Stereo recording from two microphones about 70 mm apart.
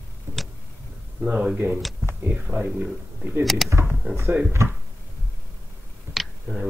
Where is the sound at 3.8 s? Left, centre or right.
Centre.